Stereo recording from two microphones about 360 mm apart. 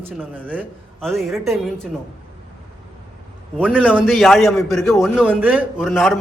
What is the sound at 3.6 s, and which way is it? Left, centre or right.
A man's voice, centre.